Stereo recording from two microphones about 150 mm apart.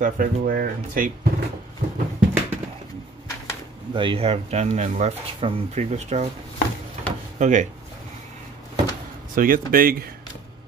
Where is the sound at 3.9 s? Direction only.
35° right (ahead or behind).